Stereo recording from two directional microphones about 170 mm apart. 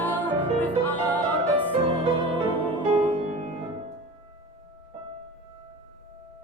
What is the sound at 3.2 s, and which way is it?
Music, 35° right (ahead or behind).